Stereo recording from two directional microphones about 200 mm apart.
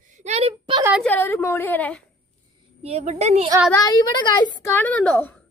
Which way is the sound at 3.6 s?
20° left (ahead or behind).